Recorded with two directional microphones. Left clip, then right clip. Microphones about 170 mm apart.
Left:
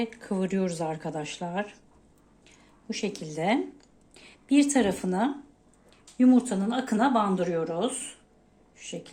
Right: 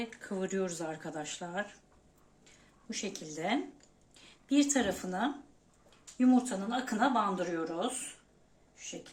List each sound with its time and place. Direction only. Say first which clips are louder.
0.0 s speech: left 7 dB; 30° left (ahead or behind)